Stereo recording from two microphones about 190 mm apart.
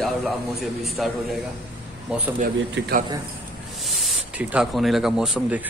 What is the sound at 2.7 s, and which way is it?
Speech, 60° right (ahead or behind).